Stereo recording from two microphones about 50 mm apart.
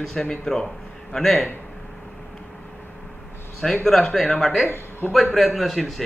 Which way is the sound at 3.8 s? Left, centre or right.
Centre.